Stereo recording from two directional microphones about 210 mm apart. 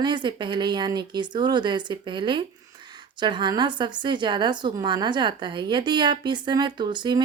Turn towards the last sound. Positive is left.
turn(degrees=-20)  # may be behind; listen again after turning